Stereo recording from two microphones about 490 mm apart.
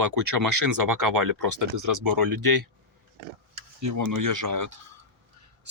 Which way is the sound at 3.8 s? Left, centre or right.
Right.